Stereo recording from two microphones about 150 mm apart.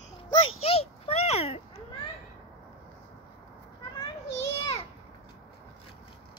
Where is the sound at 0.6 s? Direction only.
40° left (ahead or behind).